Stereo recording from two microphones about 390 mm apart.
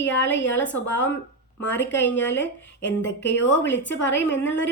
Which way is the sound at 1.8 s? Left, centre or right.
Left.